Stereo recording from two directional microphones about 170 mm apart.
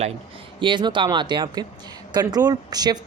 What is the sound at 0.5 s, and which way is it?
Speech, 30° right (ahead or behind).